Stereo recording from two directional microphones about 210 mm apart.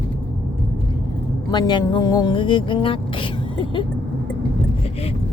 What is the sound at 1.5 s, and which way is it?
Speech, 20° left (ahead or behind).